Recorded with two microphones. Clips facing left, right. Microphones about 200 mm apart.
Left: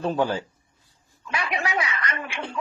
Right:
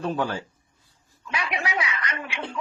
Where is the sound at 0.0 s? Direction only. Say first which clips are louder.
Left 3 dB; 30° left (ahead or behind).